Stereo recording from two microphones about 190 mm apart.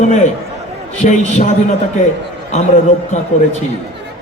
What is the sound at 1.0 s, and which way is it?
Speech, 40° left (ahead or behind).